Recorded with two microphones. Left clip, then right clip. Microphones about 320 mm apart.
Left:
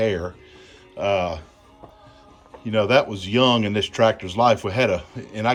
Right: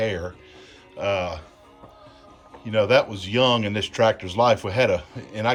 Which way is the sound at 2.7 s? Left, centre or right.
Centre.